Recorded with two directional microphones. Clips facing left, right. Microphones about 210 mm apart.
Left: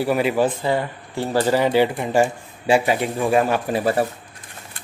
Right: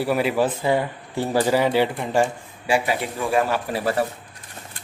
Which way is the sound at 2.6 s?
25° left (ahead or behind).